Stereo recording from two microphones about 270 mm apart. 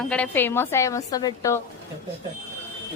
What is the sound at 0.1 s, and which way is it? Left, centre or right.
A woman's voice, centre.